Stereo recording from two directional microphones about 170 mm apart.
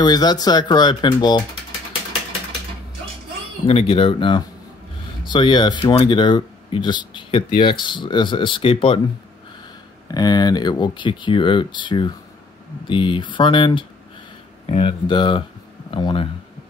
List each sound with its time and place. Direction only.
0.0 s speech: 25° left (ahead or behind)
3.6 s speech: 35° left (ahead or behind)
10.1 s speech: 25° left (ahead or behind)